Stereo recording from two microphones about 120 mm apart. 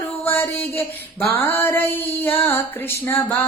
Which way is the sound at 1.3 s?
20° left (ahead or behind).